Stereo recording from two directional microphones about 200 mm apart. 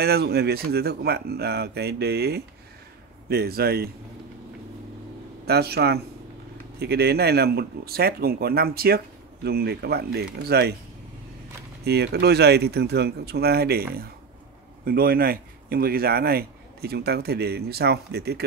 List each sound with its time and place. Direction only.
0.0 s a man's voice: 55° right (ahead or behind)
5.5 s a man's voice: 55° right (ahead or behind)
11.8 s a man's voice: 55° right (ahead or behind)